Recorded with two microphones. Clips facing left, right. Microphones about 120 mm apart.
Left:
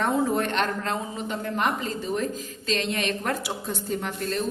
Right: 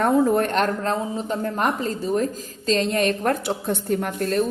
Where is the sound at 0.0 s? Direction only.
45° right (ahead or behind).